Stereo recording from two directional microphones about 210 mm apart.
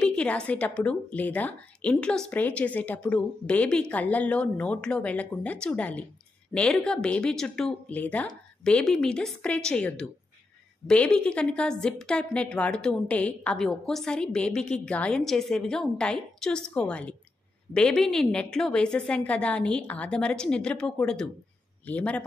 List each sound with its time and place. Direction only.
0.0 s a woman's voice: 5° left (ahead or behind)